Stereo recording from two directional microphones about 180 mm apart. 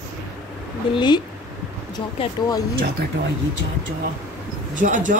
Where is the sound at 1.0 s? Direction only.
25° left (ahead or behind).